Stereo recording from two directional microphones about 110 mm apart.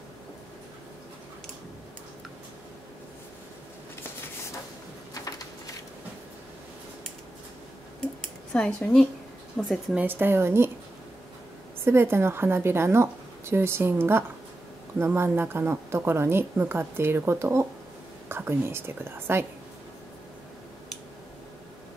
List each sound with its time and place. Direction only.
8.5 s a woman's voice: 5° left (ahead or behind)
10.0 s speech: 20° right (ahead or behind)
11.8 s speech: 20° right (ahead or behind)